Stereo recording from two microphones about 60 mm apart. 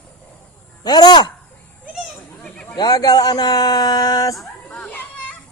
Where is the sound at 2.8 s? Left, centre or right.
Left.